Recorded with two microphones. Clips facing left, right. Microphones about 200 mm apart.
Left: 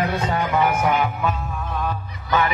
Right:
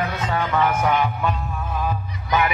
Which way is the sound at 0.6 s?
10° left (ahead or behind).